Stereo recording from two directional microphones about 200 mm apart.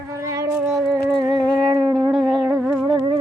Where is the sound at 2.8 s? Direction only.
20° right (ahead or behind).